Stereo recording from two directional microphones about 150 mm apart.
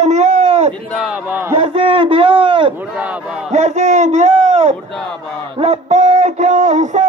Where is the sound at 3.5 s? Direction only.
50° right (ahead or behind).